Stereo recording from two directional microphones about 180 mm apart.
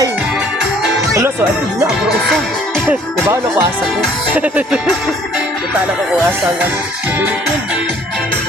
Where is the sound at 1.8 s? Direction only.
Centre (ahead or behind).